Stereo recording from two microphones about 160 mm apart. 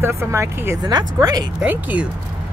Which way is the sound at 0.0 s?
15° right (ahead or behind).